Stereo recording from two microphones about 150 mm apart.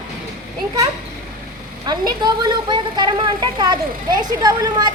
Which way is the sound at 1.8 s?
25° right (ahead or behind).